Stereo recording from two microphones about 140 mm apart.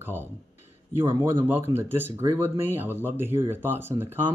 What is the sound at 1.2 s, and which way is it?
Speech, 15° right (ahead or behind).